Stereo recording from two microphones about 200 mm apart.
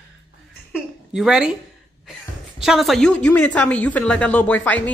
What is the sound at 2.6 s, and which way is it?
Speech, centre (ahead or behind).